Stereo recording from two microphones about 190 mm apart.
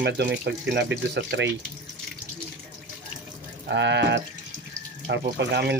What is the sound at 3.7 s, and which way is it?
Speech, 65° right (ahead or behind).